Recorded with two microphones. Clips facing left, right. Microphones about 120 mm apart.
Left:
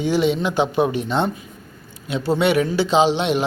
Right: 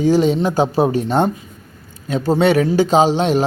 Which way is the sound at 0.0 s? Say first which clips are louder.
Right 4 dB; 40° right (ahead or behind).